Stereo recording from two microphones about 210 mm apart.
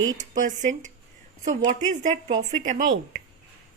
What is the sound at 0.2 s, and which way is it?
Speech, 35° right (ahead or behind).